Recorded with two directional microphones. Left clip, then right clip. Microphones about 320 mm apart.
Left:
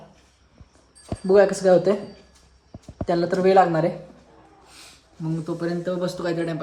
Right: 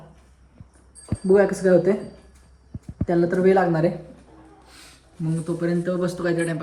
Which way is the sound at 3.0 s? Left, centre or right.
Centre.